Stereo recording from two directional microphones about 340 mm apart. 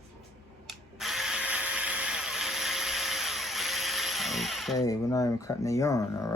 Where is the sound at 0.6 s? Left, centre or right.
Centre.